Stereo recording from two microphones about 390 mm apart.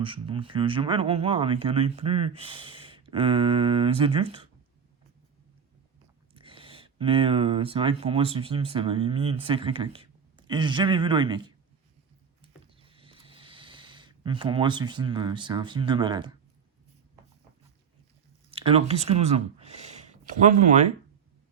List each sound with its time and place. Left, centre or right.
0.0 s speech: centre
6.3 s speech: centre
12.4 s a sound: centre
18.5 s speech: centre